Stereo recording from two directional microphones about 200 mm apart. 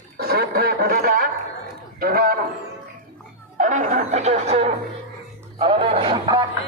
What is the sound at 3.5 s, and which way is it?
A man's voice, 40° right (ahead or behind).